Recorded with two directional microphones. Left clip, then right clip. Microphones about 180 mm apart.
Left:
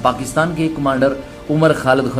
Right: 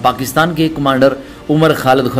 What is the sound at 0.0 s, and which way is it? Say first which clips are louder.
A man's voice: right 3 dB; 20° right (ahead or behind).